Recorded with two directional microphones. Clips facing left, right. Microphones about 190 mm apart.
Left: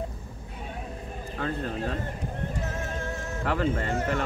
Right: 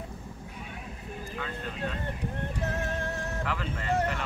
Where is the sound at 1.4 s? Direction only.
40° left (ahead or behind).